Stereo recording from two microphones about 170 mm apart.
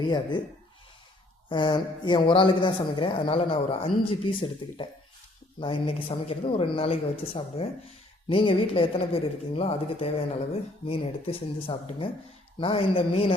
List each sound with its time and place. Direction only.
0.1 s a woman's voice: 25° left (ahead or behind)
1.5 s a woman's voice: 30° left (ahead or behind)